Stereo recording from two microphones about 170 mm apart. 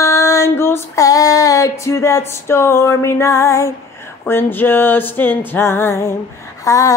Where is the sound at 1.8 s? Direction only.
15° left (ahead or behind).